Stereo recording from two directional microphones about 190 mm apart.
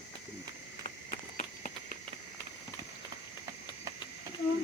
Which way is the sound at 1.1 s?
40° left (ahead or behind).